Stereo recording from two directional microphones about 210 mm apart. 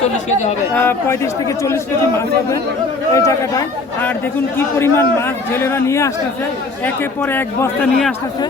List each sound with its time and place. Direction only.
0.8 s a man's voice: 10° left (ahead or behind)